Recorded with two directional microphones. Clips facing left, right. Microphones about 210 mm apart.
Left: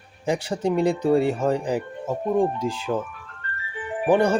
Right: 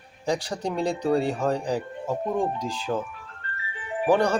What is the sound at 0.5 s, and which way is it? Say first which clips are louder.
Speech: left 5 dB; 5° left (ahead or behind).